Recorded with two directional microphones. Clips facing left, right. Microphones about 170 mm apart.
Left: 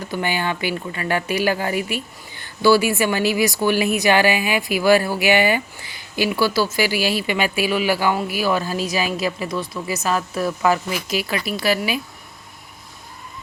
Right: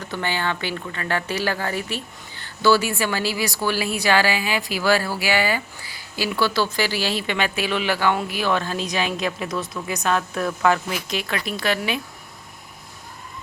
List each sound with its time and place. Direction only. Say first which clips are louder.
0.1 s speech: left 2 dB; 10° left (ahead or behind)